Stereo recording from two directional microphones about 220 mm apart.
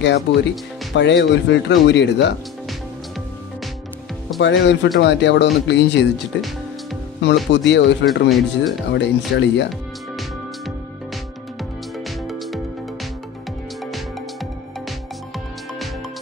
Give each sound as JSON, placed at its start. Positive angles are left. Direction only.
{"t": 0.0, "sound": "speech", "side_deg": 50}
{"t": 4.4, "sound": "speech", "side_deg": 55}
{"t": 7.2, "sound": "speech", "side_deg": 50}
{"t": 8.1, "sound": "speech", "side_deg": 0}
{"t": 8.9, "sound": "speech", "side_deg": 55}